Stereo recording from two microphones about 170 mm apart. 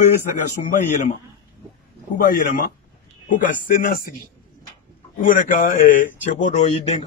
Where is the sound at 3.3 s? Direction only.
50° left (ahead or behind).